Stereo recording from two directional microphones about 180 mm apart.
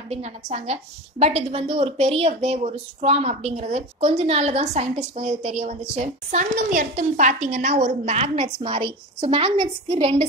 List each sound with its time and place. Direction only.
0.1 s a woman's voice: 40° right (ahead or behind)